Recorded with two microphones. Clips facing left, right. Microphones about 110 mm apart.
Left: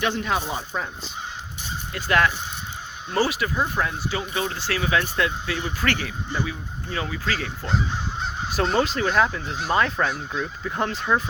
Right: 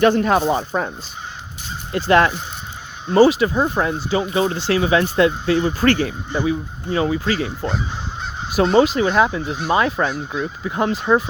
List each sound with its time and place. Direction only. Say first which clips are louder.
0.0 s speech: right 10 dB; 50° right (ahead or behind)
1.9 s speech: right 7 dB; 30° right (ahead or behind)